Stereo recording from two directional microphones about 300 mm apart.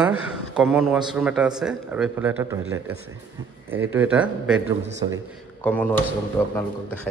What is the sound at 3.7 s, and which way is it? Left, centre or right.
Speech, centre.